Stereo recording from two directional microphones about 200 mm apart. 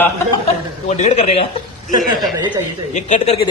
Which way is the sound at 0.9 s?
35° left (ahead or behind).